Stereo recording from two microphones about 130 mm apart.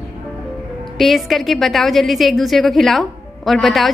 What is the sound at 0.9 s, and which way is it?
A woman's voice, centre (ahead or behind).